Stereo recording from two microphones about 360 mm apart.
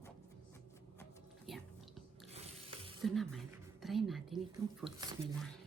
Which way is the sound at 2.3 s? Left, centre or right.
Centre.